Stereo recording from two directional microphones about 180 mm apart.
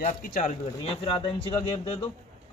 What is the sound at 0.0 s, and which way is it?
Speech, 45° left (ahead or behind).